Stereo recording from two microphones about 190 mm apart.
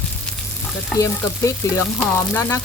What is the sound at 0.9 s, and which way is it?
Frying, 15° left (ahead or behind).